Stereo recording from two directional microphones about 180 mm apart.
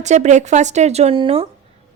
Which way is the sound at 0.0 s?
40° right (ahead or behind).